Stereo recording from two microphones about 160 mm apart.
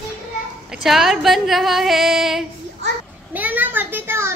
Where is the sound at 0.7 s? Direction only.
Centre (ahead or behind).